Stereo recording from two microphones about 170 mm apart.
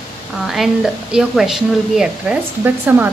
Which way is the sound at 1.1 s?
Centre (ahead or behind).